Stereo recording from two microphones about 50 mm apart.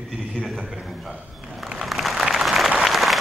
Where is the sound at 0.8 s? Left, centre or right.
Centre.